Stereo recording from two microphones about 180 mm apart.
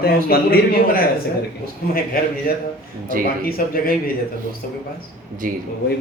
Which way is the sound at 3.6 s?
50° left (ahead or behind).